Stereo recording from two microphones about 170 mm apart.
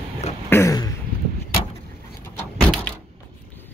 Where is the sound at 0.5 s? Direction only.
20° left (ahead or behind).